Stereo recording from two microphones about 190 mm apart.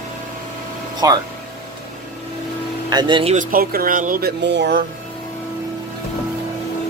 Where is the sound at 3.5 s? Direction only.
50° right (ahead or behind).